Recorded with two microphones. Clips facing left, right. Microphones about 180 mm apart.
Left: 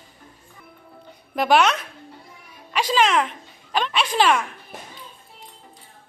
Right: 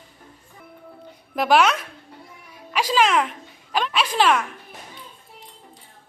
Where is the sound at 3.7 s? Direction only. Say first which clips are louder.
Even; 5° right (ahead or behind).